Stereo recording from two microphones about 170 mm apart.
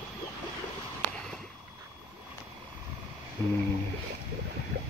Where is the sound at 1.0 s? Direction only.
45° right (ahead or behind).